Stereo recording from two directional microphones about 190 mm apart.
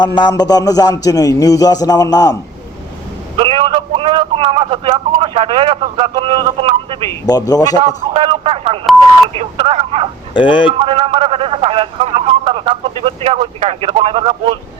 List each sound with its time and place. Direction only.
0.0 s a man's voice: 25° left (ahead or behind)
3.3 s a man's voice: 30° right (ahead or behind)
7.1 s a man's voice: 20° left (ahead or behind)
7.9 s a man's voice: 30° right (ahead or behind)
10.3 s a man's voice: 25° left (ahead or behind)
10.8 s speech: 30° right (ahead or behind)